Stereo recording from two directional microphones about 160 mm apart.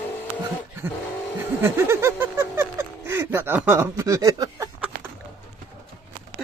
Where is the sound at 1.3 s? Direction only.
15° right (ahead or behind).